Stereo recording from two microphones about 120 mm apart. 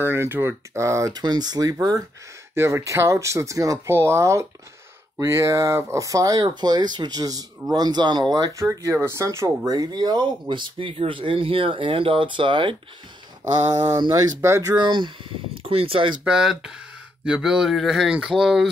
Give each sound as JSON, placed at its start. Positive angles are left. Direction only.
{"t": 0.0, "sound": "speech", "side_deg": -20}
{"t": 8.5, "sound": "speech", "side_deg": -25}
{"t": 15.6, "sound": "speech", "side_deg": -50}
{"t": 16.3, "sound": "speech", "side_deg": -5}